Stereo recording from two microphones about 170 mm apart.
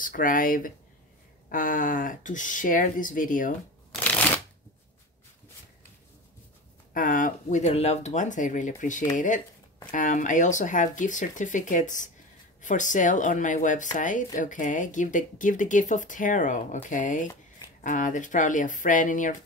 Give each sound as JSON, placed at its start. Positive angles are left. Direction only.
{"t": 0.0, "sound": "speech", "side_deg": 55}
{"t": 4.0, "sound": "shuffling cards", "side_deg": 10}
{"t": 6.9, "sound": "speech", "side_deg": 50}